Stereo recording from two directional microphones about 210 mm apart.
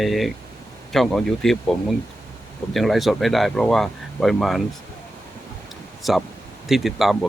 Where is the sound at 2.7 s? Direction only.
Centre (ahead or behind).